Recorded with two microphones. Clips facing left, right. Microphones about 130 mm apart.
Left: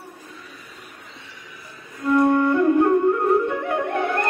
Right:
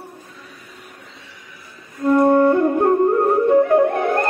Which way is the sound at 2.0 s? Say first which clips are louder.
Right 4 dB; 35° right (ahead or behind).